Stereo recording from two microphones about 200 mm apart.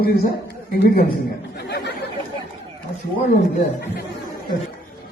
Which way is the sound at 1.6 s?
55° left (ahead or behind).